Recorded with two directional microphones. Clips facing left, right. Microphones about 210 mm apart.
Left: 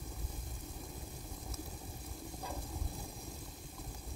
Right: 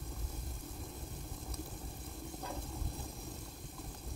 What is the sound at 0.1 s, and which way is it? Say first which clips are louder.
Vehicle: right 1 dB; centre (ahead or behind).